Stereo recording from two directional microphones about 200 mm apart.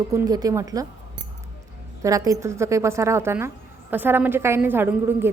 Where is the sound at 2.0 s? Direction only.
15° right (ahead or behind).